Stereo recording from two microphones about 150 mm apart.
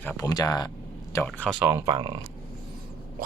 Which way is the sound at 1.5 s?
15° right (ahead or behind).